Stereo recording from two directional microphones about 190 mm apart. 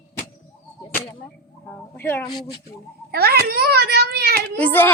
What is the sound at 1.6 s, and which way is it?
Speech, 10° left (ahead or behind).